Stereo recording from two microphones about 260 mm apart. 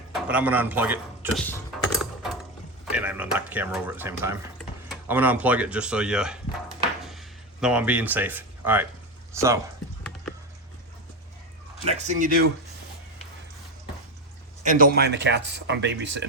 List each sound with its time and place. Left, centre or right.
0.1 s a man's voice: centre
1.4 s a sound: centre
2.0 s mechanisms: centre
2.9 s speech: centre
7.0 s a sound: centre
9.3 s speech: centre
11.9 s speech: right
14.6 s speech: right